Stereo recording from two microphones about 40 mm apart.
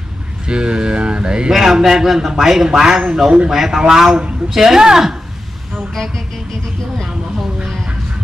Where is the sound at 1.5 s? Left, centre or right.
Centre.